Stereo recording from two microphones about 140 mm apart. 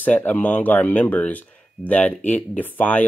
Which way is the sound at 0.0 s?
10° left (ahead or behind).